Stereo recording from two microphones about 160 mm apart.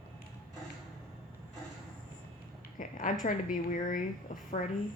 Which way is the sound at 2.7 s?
55° left (ahead or behind).